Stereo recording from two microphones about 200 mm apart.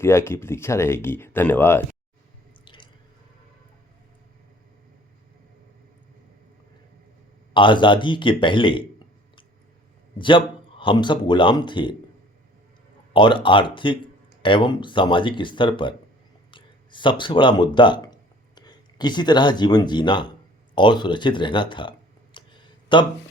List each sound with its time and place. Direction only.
0.0 s speech: 15° left (ahead or behind)
2.6 s drip: 25° left (ahead or behind)
7.5 s speech: 25° left (ahead or behind)
10.2 s speech: 25° left (ahead or behind)
13.1 s speech: 25° left (ahead or behind)
22.4 s a sound: 25° left (ahead or behind)
22.9 s speech: 25° left (ahead or behind)